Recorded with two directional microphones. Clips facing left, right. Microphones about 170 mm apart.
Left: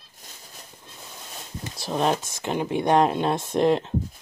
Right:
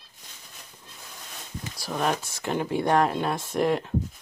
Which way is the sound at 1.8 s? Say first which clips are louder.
Left 3 dB; 25° left (ahead or behind).